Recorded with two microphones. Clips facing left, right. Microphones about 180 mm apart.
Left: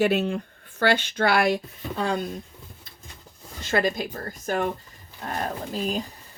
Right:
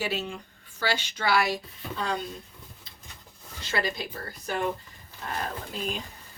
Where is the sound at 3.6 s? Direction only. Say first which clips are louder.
Left 6 dB; 50° left (ahead or behind).